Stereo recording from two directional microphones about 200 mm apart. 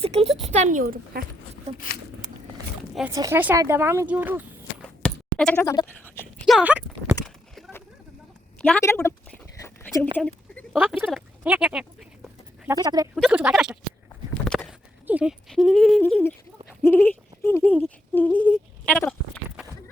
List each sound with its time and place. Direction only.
0.0 s a sound: 30° right (ahead or behind)
0.5 s a woman's voice: 40° right (ahead or behind)
3.1 s speech: 15° right (ahead or behind)
5.0 s bleat: 5° left (ahead or behind)
5.6 s toothbrush: 15° left (ahead or behind)
6.5 s a sound: 5° right (ahead or behind)
8.6 s a woman's voice: 10° left (ahead or behind)
9.6 s a sound: 15° left (ahead or behind); by 12.7 s centre (ahead or behind)
12.7 s speech: 20° right (ahead or behind)
13.1 s speech: 5° right (ahead or behind)
14.4 s horse: centre (ahead or behind)
15.0 s speech: 5° right (ahead or behind)